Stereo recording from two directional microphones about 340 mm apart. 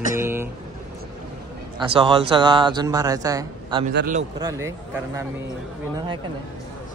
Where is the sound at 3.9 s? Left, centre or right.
Right.